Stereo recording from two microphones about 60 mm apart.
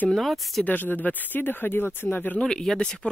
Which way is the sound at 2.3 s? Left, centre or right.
Centre.